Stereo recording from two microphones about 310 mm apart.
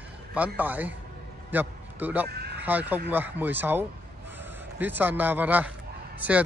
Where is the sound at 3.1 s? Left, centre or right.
Centre.